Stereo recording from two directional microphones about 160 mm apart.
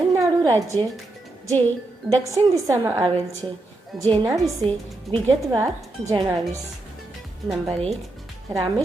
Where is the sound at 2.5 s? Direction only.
20° right (ahead or behind).